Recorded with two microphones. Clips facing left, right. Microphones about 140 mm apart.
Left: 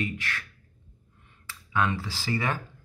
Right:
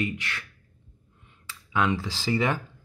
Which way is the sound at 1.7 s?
20° right (ahead or behind).